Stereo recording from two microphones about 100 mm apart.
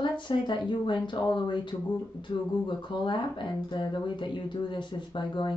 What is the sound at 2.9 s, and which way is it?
Speech, 50° left (ahead or behind).